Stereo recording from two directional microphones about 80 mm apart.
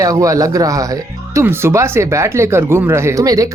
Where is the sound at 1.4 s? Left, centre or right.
Right.